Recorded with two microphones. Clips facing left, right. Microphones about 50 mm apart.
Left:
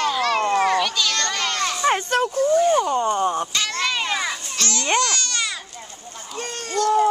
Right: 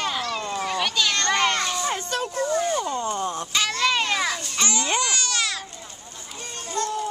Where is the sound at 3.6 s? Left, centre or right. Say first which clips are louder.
Right 1 dB; centre.